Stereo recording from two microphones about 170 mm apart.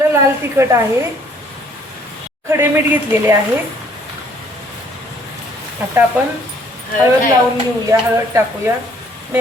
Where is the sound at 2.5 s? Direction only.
15° right (ahead or behind).